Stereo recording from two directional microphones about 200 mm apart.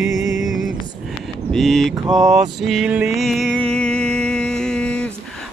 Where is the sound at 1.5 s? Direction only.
Centre (ahead or behind).